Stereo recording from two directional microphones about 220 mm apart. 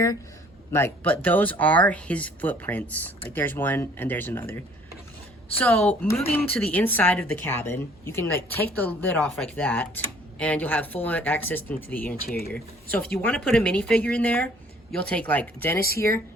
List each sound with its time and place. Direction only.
0.7 s a woman's voice: 10° left (ahead or behind)